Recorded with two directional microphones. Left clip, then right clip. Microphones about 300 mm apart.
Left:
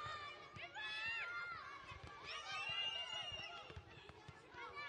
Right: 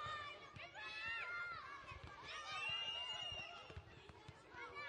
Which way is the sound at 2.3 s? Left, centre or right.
Centre.